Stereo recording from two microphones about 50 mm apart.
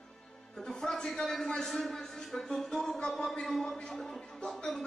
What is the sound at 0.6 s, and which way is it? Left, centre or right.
A man's voice, centre.